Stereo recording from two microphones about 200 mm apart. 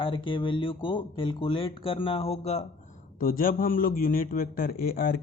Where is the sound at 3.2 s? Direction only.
45° left (ahead or behind).